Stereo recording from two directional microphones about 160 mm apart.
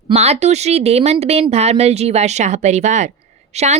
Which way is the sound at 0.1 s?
40° right (ahead or behind).